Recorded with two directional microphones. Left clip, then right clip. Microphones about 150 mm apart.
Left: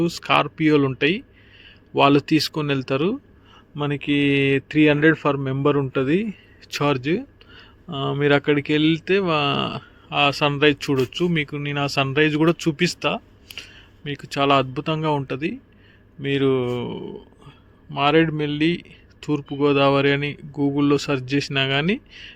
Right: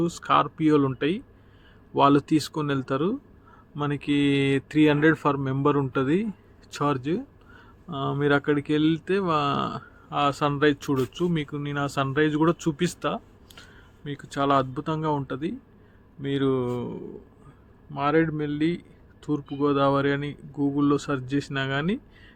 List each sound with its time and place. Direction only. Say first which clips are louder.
0.0 s speech: left 3 dB; 5° left (ahead or behind)